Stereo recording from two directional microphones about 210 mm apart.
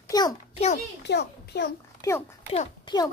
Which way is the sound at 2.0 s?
15° left (ahead or behind).